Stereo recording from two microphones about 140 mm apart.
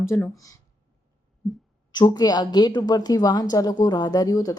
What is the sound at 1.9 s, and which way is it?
A woman's voice, 30° left (ahead or behind).